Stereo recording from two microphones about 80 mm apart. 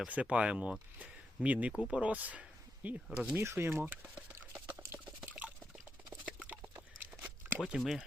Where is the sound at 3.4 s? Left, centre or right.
Right.